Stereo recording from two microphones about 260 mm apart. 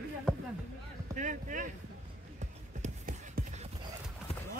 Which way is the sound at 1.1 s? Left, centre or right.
Right.